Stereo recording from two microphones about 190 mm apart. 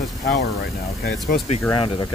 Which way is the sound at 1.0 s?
55° left (ahead or behind).